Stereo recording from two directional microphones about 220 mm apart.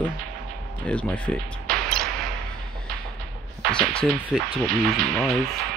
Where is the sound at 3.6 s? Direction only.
5° left (ahead or behind).